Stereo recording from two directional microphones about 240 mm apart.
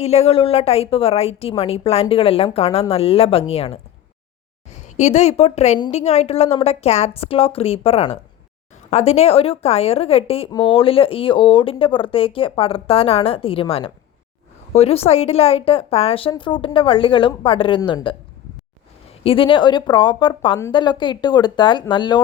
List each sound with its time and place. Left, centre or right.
0.0 s a woman's voice: left
19.2 s a woman's voice: left